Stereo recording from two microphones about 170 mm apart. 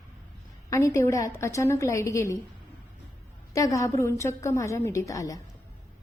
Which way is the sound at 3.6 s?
20° left (ahead or behind).